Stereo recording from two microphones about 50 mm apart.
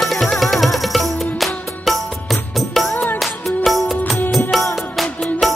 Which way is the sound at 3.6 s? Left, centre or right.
Centre.